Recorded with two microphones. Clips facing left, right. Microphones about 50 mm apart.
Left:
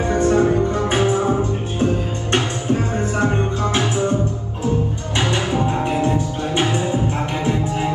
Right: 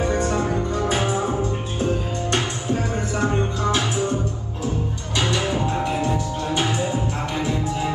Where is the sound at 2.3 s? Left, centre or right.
Left.